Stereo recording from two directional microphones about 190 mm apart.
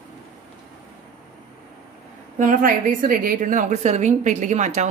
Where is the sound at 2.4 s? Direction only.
45° right (ahead or behind).